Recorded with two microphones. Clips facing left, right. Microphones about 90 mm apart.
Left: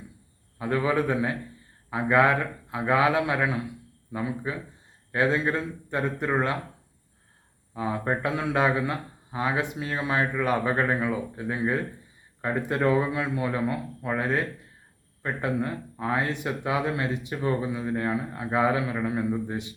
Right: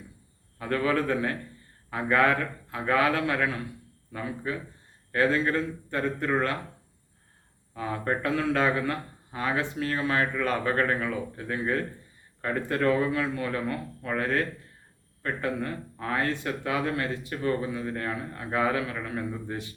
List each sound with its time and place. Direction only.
0.6 s speech: 15° left (ahead or behind)
7.7 s speech: 15° left (ahead or behind)